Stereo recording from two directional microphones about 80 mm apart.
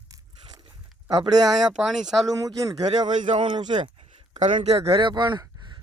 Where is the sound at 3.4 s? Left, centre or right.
Right.